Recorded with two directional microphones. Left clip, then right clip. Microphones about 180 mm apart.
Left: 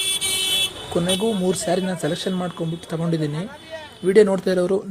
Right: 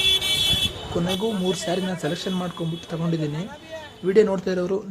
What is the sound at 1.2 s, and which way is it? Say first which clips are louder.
Speech: left 3 dB; 20° left (ahead or behind).